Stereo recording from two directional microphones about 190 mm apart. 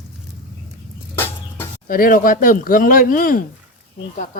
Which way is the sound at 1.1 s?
10° left (ahead or behind).